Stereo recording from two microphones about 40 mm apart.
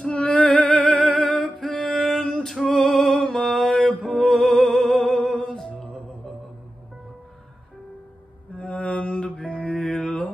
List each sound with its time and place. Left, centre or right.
0.0 s music: left
1.2 s a sound: left
1.6 s music: centre
3.6 s mantra: centre
4.2 s music: centre
5.4 s a capella: centre
5.8 s music: centre
8.5 s mantra: left
9.8 s mantra: left